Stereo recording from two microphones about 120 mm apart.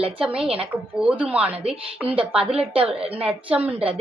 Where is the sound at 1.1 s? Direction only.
10° right (ahead or behind).